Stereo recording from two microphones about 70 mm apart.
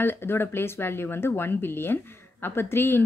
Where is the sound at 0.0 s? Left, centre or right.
Left.